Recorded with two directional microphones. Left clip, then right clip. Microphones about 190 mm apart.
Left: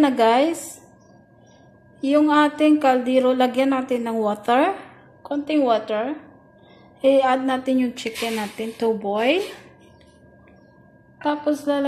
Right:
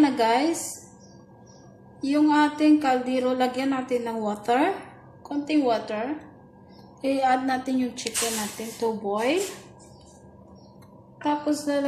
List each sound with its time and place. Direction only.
0.0 s a woman's voice: 30° left (ahead or behind)
2.0 s a woman's voice: 30° left (ahead or behind)
11.2 s a woman's voice: 25° left (ahead or behind)